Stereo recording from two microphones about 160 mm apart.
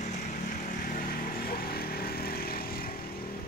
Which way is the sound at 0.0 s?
50° left (ahead or behind).